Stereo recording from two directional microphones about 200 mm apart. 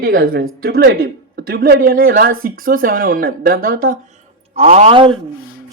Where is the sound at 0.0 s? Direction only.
45° right (ahead or behind).